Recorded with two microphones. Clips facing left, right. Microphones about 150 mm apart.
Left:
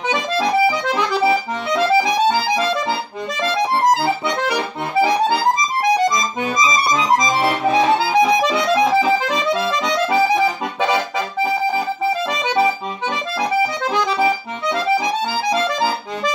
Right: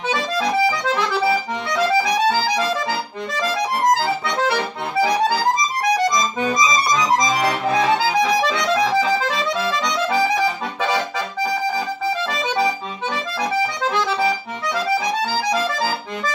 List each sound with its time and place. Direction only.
0.9 s accordion: 20° left (ahead or behind)
6.6 s music: 25° left (ahead or behind)
10.0 s accordion: 25° left (ahead or behind)
13.4 s accordion: 15° left (ahead or behind)